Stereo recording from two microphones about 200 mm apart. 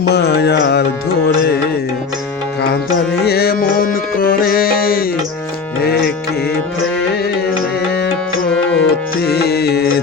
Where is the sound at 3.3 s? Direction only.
50° left (ahead or behind).